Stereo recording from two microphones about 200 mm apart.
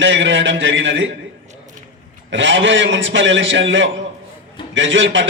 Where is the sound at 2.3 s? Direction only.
65° right (ahead or behind).